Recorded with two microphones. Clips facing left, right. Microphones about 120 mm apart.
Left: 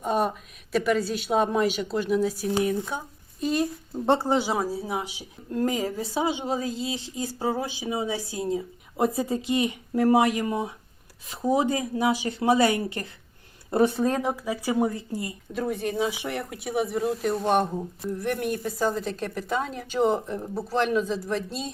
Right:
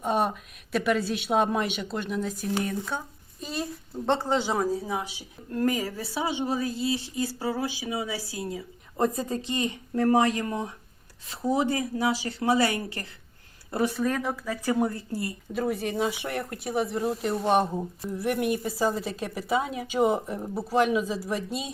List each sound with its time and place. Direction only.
0.0 s speech: centre (ahead or behind)
3.4 s speech: centre (ahead or behind)
3.9 s a woman's voice: 10° left (ahead or behind); by 8.6 s 25° left (ahead or behind)
9.0 s a woman's voice: 10° left (ahead or behind)
15.5 s speech: centre (ahead or behind)